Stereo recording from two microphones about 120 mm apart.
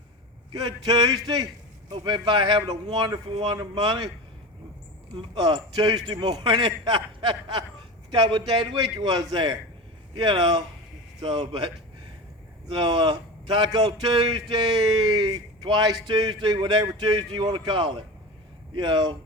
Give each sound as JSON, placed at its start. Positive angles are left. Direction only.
{"t": 0.5, "sound": "speech", "side_deg": -35}
{"t": 5.1, "sound": "a man's voice", "side_deg": -40}
{"t": 12.8, "sound": "speech", "side_deg": -45}